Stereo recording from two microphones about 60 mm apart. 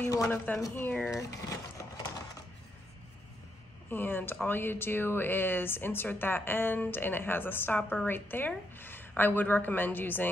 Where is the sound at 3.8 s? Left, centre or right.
Left.